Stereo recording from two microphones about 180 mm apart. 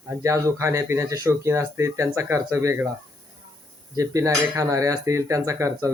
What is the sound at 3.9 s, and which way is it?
Speech, 15° right (ahead or behind).